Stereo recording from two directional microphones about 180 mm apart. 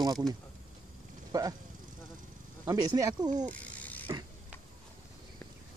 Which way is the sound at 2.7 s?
20° right (ahead or behind).